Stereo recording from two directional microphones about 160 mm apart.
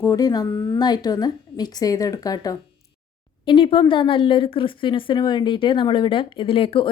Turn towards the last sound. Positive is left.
turn(degrees=35)  # may be behind; listen again after turning